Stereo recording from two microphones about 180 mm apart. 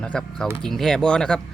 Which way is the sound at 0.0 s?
5° left (ahead or behind).